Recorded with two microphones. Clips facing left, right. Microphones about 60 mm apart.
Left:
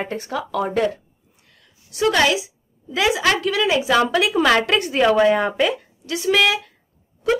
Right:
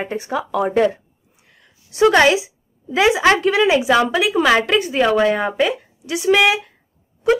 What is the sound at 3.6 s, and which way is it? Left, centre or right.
Speech, centre.